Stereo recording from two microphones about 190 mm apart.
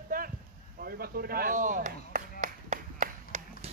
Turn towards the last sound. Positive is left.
turn(degrees=-40)  # may be behind; listen again after turning